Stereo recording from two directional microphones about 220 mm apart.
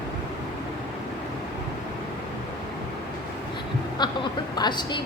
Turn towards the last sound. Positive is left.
turn(degrees=20)  # may be behind; listen again after turning